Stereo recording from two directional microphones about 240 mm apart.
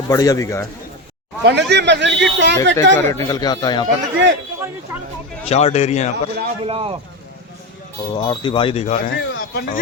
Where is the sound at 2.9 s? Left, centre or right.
Centre.